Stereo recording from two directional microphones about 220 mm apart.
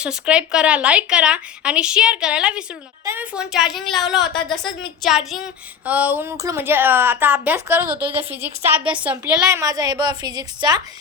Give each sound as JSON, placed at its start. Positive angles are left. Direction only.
{"t": 0.0, "sound": "speech", "side_deg": -5}